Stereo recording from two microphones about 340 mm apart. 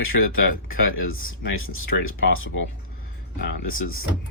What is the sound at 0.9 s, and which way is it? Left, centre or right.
Speech, left.